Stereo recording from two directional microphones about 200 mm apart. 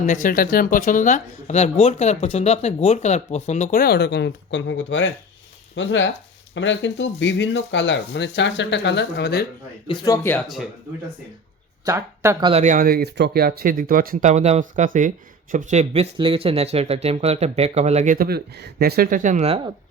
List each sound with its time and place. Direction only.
0.0 s speech: 40° left (ahead or behind)
9.8 s speech: 20° left (ahead or behind)
10.3 s speech: centre (ahead or behind)
11.9 s speech: 15° right (ahead or behind)
12.5 s speech: 35° right (ahead or behind)